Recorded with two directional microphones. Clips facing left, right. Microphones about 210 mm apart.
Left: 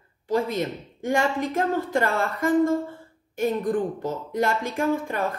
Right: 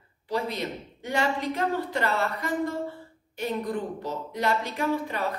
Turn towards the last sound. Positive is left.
turn(degrees=50)  # may be behind; listen again after turning